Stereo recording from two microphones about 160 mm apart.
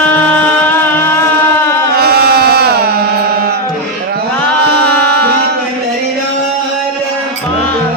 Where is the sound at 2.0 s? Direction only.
80° right.